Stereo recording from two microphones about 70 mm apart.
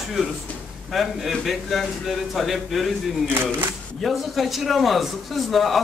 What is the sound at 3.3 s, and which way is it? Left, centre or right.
Speech, right.